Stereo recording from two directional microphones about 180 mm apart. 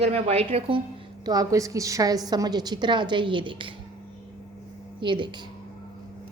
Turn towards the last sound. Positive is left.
turn(degrees=-25)  # may be behind; listen again after turning